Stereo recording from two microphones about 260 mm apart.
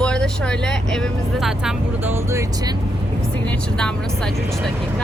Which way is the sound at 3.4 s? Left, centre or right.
Centre.